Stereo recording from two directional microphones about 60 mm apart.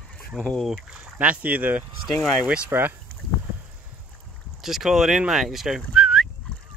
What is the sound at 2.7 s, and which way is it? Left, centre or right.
Speech, right.